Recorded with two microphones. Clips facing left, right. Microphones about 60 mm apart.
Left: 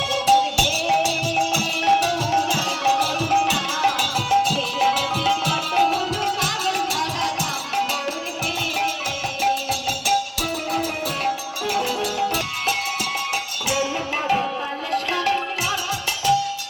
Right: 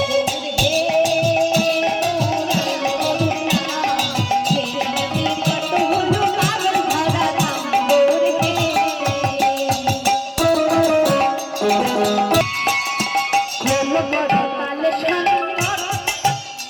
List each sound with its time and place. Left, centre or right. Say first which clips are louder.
3.1 s music: right 1 dB; centre
6.1 s music: right 6 dB; right
10.4 s music: right 10 dB; right
12.3 s music: right 7 dB; right
13.3 s music: right 7 dB; right